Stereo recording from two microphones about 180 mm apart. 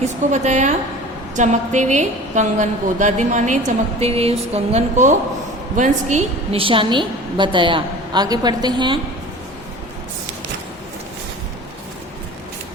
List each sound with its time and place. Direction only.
0.0 s a woman's voice: 40° right (ahead or behind); by 9.0 s 25° right (ahead or behind)